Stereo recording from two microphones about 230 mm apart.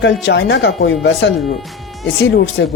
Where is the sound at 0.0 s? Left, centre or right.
Left.